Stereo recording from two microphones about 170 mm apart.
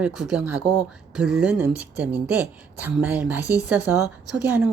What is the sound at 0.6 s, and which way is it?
Speech, 20° left (ahead or behind).